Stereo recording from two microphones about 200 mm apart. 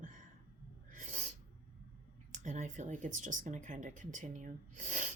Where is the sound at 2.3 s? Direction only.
35° right (ahead or behind).